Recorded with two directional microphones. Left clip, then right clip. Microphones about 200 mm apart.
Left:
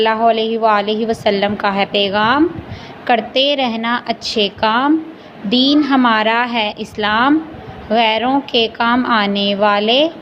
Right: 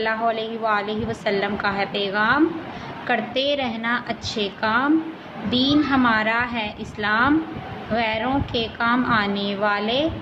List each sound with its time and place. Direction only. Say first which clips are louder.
0.0 s a woman's voice: left 9 dB; 25° left (ahead or behind)